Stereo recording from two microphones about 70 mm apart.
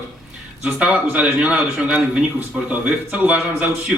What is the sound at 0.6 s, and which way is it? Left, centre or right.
A man's voice, centre.